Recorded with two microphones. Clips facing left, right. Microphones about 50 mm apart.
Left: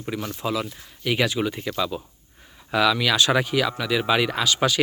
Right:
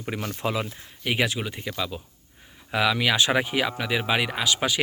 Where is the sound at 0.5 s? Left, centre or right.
Right.